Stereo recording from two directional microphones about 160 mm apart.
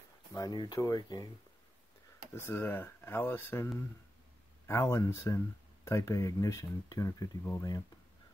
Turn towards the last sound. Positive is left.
turn(degrees=20)  # may be behind; listen again after turning